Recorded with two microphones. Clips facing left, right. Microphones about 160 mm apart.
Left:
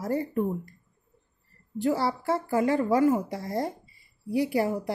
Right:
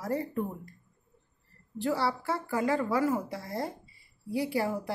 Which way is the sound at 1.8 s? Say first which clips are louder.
Left 3 dB; 20° left (ahead or behind).